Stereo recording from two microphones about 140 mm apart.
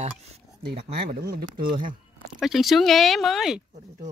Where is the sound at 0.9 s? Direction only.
90° right.